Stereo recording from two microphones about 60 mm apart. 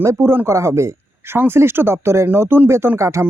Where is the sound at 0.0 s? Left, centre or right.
Right.